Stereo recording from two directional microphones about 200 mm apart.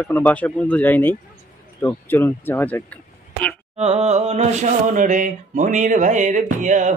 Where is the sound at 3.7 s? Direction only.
30° right (ahead or behind).